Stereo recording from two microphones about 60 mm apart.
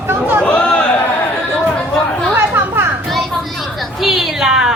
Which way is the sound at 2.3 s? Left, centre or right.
Right.